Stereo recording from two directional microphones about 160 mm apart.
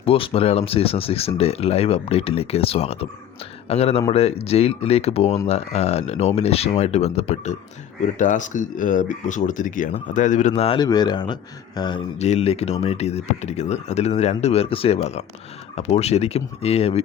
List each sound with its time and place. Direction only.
0.0 s speech: 35° left (ahead or behind)
10.6 s speech: 35° left (ahead or behind)
12.2 s speech: 40° left (ahead or behind)